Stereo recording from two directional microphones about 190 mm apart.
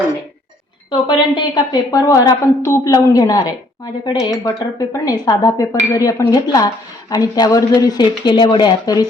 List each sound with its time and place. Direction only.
0.9 s a woman's voice: 25° left (ahead or behind)